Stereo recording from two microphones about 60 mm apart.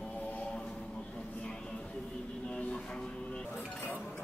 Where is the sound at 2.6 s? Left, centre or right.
Centre.